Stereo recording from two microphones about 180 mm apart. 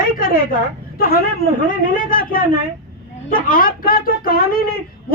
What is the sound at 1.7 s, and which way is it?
A woman's voice, 50° left (ahead or behind).